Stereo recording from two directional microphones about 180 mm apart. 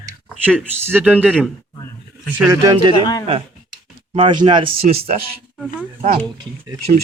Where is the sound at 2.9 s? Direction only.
20° left (ahead or behind).